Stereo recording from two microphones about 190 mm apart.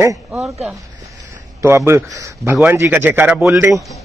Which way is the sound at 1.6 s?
15° right (ahead or behind).